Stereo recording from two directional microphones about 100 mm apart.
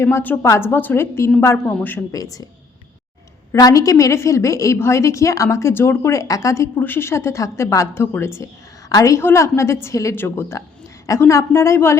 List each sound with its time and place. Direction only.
0.0 s a woman's voice: 20° left (ahead or behind)
2.1 s a woman's voice: 35° left (ahead or behind)
3.5 s a woman's voice: 35° left (ahead or behind)
6.7 s a woman's voice: 20° left (ahead or behind)